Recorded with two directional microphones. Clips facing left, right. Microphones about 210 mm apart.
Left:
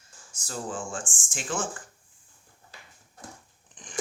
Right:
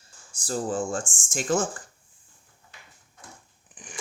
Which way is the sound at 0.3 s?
35° right (ahead or behind).